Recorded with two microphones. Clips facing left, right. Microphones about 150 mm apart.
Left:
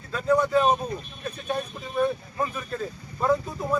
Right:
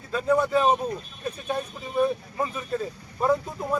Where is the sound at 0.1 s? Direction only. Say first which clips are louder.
Even; 10° right (ahead or behind).